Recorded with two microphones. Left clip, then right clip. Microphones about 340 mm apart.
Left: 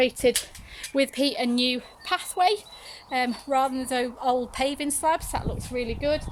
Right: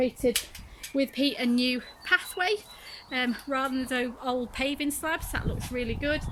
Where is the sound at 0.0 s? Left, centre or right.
Left.